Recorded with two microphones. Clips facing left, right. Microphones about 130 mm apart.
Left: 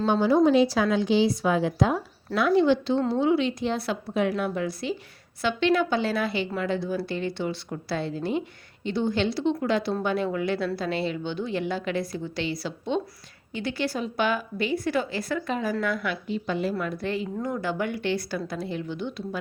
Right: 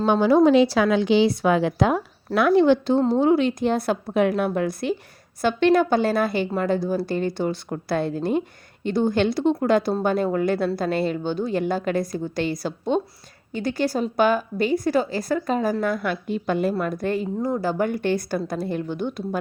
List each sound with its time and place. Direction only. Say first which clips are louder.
0.0 s a woman's voice: right 4 dB; 70° right (ahead or behind); by 17.2 s 45° right (ahead or behind)
17.4 s speech: right 6 dB; 35° right (ahead or behind)